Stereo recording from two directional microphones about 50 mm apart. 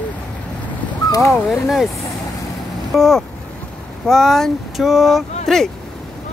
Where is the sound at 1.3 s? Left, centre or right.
Centre.